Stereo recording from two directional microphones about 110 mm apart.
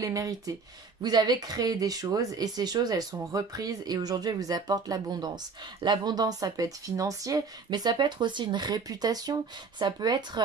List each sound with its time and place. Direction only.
0.0 s speech: 30° right (ahead or behind)